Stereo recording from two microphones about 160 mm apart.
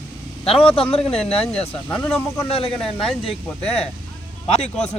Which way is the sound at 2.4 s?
35° left (ahead or behind).